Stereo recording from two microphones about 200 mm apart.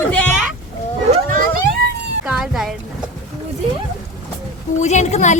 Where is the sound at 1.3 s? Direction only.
50° right (ahead or behind).